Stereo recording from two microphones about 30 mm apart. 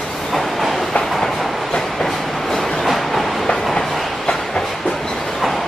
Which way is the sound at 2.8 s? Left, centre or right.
Centre.